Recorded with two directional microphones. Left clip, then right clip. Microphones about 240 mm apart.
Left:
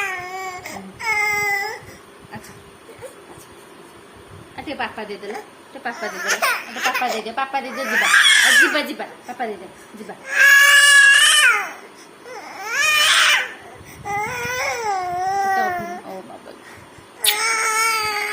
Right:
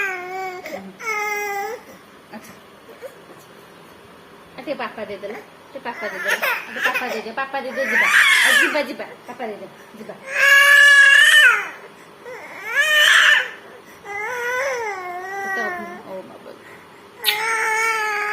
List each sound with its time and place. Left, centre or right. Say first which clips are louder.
0.0 s a sound: right 1 dB; centre
1.3 s baby cry: left 4 dB; centre
4.6 s speech: even; centre
10.2 s goat: left 1 dB; centre
12.6 s baby cry: right 2 dB; centre
14.3 s baby cry: right 1 dB; centre
17.2 s cat: left 1 dB; centre